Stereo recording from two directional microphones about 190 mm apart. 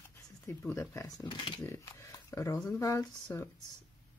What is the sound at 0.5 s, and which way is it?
Speech, 15° left (ahead or behind).